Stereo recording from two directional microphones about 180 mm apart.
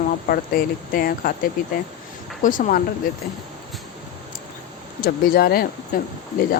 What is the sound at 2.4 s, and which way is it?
Speech, 50° left (ahead or behind).